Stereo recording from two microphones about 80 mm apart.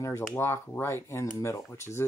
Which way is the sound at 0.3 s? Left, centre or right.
Left.